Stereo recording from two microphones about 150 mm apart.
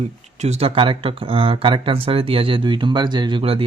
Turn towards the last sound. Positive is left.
turn(degrees=-40)  # may be behind; listen again after turning